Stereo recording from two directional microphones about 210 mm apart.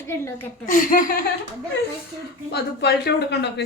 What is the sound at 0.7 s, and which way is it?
Speech, 40° left (ahead or behind).